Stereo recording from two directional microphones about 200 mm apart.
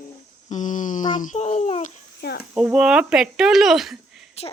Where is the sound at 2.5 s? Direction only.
5° right (ahead or behind).